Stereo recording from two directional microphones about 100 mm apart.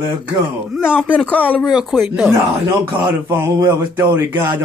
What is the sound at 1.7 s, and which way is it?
Speech, 10° right (ahead or behind).